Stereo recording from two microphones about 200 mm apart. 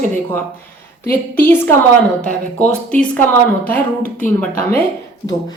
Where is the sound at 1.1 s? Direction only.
10° left (ahead or behind).